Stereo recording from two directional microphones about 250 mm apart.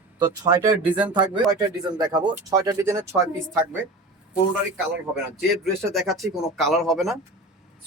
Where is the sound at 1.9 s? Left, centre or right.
Centre.